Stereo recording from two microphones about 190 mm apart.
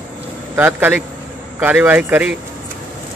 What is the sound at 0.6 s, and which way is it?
Speech, 10° right (ahead or behind).